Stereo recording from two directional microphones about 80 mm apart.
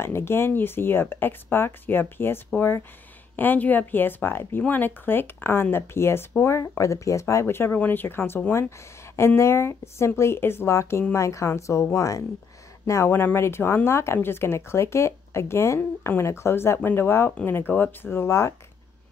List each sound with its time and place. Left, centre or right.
0.0 s speech: left